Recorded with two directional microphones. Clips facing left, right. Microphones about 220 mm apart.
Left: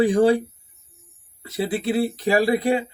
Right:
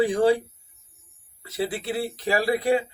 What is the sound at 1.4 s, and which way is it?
A man's voice, 20° left (ahead or behind).